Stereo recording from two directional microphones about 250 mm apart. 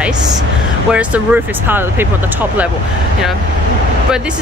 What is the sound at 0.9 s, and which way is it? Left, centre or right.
Speech, centre.